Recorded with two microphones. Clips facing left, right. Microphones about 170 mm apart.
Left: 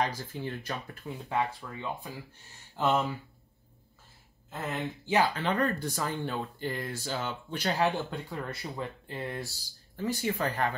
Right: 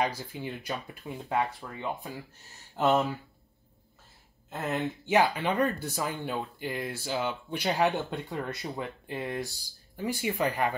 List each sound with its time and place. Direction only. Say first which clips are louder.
0.3 s speech: right 1 dB; 10° right (ahead or behind)
4.5 s speech: right 3 dB; 20° right (ahead or behind)